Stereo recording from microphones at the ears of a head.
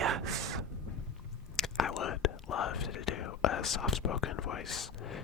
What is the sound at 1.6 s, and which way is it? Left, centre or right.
Whispering, left.